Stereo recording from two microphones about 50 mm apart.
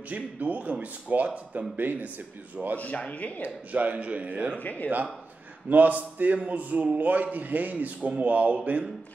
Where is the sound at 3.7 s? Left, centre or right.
Right.